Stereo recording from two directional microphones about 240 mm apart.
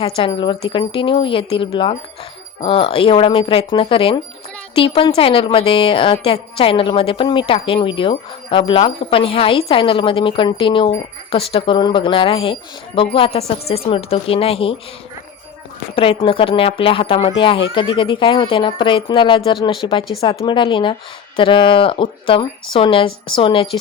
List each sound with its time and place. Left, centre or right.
0.0 s a woman's voice: left
16.0 s a woman's voice: left